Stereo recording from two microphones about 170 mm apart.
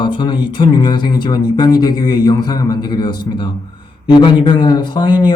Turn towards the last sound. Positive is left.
turn(degrees=25)  # may be behind; listen again after turning